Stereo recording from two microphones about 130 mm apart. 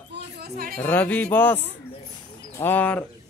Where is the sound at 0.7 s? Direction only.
15° left (ahead or behind).